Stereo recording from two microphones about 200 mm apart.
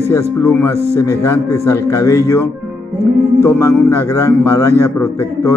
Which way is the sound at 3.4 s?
15° left (ahead or behind).